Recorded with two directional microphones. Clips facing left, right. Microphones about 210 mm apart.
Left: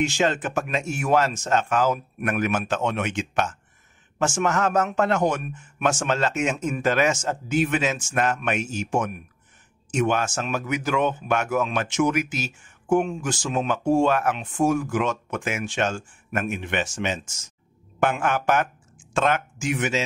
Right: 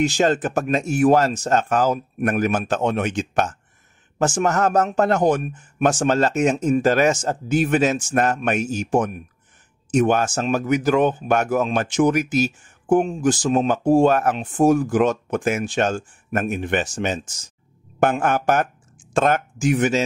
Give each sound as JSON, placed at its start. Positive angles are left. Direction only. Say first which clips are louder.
{"t": 0.0, "sound": "speech", "louder": "right 4 dB", "side_deg": -40}